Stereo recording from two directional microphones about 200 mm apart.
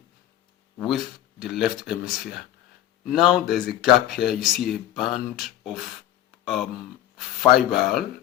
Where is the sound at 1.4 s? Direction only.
Centre (ahead or behind).